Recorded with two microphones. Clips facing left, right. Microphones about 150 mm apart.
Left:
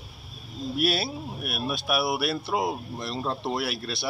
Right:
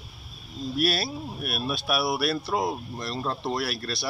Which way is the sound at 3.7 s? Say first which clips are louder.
Even; 20° left (ahead or behind).